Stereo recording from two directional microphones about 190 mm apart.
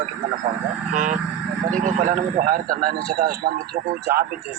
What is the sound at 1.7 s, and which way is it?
A man's voice, 45° right (ahead or behind).